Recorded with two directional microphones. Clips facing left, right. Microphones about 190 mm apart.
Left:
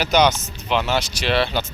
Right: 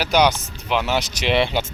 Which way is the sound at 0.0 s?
10° right (ahead or behind).